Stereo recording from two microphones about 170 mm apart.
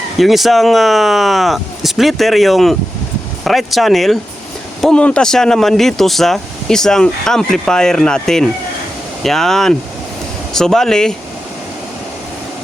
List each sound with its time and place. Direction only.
0.2 s speech: centre (ahead or behind)